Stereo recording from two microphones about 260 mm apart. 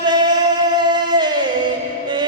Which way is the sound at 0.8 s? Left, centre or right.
Centre.